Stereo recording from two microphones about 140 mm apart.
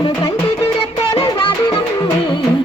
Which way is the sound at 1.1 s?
40° left (ahead or behind).